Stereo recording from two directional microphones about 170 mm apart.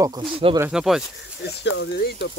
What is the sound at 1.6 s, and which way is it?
Speech, 90° left.